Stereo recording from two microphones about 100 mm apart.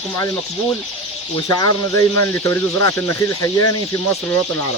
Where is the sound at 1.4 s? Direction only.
40° left (ahead or behind).